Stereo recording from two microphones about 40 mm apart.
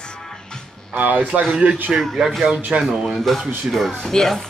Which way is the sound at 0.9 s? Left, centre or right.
Right.